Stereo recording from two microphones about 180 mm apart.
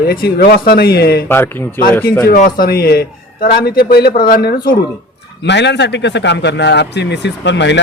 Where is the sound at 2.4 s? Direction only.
55° left (ahead or behind).